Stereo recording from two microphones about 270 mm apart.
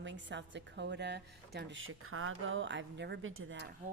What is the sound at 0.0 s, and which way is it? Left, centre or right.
A woman's voice, right.